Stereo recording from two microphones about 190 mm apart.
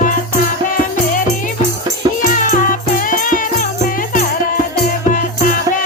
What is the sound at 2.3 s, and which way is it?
Music, 45° left (ahead or behind).